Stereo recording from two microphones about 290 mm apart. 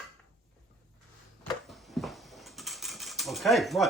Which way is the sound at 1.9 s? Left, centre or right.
Centre.